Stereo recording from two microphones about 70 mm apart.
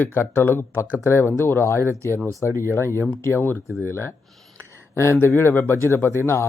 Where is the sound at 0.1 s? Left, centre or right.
Left.